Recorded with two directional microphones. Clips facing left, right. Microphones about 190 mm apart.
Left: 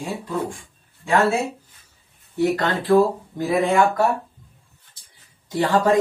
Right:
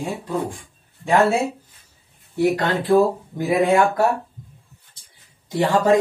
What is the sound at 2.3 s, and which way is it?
Speech, 15° right (ahead or behind).